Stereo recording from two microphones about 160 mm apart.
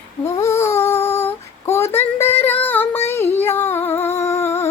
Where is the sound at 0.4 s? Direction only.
15° left (ahead or behind).